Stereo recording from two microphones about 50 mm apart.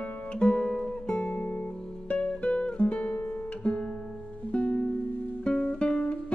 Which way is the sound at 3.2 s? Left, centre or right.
Left.